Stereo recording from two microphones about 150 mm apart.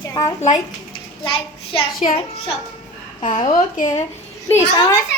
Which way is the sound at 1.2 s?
35° left (ahead or behind).